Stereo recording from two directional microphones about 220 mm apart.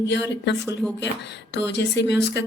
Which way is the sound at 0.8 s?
5° left (ahead or behind).